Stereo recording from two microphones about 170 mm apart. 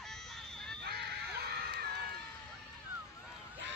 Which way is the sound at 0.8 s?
75° right (ahead or behind).